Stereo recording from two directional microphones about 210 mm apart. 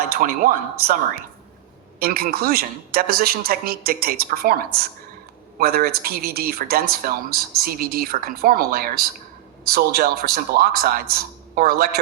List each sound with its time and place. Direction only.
0.2 s speech: 40° right (ahead or behind)
2.0 s speech: 45° right (ahead or behind)